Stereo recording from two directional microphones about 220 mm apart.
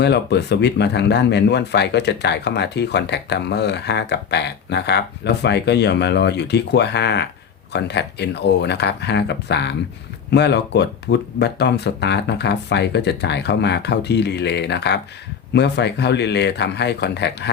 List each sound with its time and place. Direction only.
0.0 s speech: 50° left (ahead or behind)